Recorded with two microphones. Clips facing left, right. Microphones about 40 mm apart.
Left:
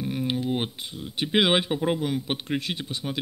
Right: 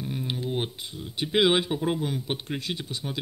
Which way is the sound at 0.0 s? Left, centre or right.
Centre.